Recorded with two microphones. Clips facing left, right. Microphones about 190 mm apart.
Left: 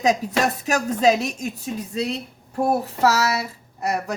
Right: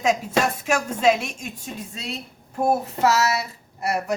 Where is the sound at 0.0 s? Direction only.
40° left (ahead or behind).